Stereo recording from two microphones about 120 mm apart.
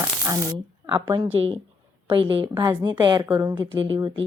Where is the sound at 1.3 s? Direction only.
55° right (ahead or behind).